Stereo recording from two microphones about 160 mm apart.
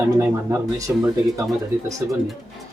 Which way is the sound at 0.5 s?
20° right (ahead or behind).